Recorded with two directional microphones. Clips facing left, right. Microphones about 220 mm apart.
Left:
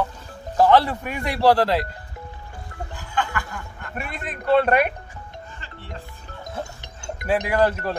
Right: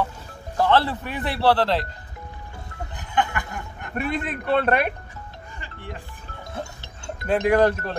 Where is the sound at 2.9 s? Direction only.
20° right (ahead or behind).